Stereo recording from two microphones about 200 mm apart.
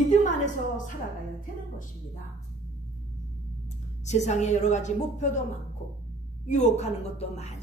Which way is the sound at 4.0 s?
35° left (ahead or behind).